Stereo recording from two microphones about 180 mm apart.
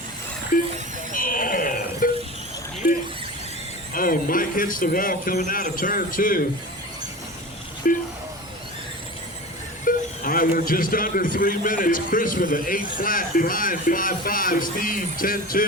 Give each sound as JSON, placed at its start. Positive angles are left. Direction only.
{"t": 0.5, "sound": "a man's voice", "side_deg": 50}
{"t": 1.1, "sound": "a sound", "side_deg": 50}
{"t": 3.9, "sound": "a man's voice", "side_deg": 50}
{"t": 7.9, "sound": "a man's voice", "side_deg": 50}
{"t": 9.8, "sound": "a man's voice", "side_deg": 50}